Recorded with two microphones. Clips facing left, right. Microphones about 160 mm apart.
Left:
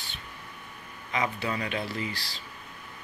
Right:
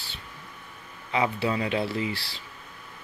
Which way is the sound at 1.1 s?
25° right (ahead or behind).